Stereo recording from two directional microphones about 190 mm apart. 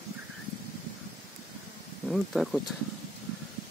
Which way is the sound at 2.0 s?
Centre (ahead or behind).